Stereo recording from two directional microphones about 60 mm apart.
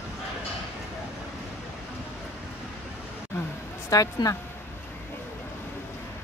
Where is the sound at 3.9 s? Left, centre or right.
Left.